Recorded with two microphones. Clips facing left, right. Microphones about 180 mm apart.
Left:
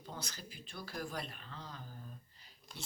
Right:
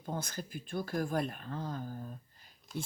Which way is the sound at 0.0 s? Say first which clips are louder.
Right 8 dB; 50° right (ahead or behind).